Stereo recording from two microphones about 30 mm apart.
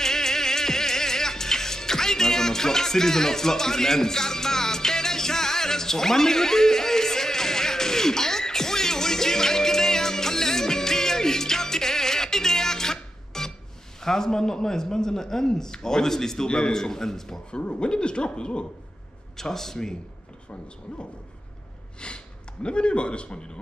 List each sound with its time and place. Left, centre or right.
0.0 s music: centre
14.0 s a man's voice: centre
16.4 s a man's voice: left
17.5 s speech: left
19.3 s a man's voice: centre
22.0 s speech: left